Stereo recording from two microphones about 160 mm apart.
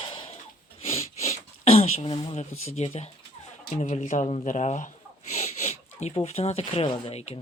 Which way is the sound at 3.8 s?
50° left (ahead or behind).